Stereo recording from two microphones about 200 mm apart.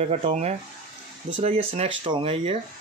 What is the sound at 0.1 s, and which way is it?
Speech, 35° right (ahead or behind).